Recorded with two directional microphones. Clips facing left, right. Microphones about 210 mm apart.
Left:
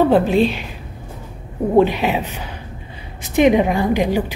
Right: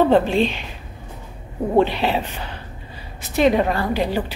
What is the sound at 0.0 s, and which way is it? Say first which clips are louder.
Speech: left 2 dB; 5° left (ahead or behind).